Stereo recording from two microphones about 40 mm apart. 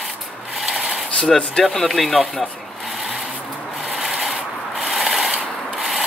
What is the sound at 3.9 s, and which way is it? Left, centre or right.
Rub, centre.